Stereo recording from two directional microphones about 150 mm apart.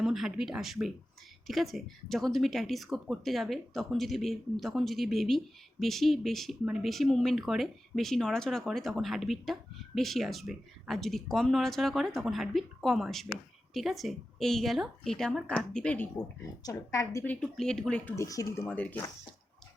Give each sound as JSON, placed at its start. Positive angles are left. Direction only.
{"t": 0.0, "sound": "speech", "side_deg": 0}
{"t": 16.6, "sound": "a woman's voice", "side_deg": 20}
{"t": 17.4, "sound": "speech", "side_deg": 5}
{"t": 18.2, "sound": "speech", "side_deg": 20}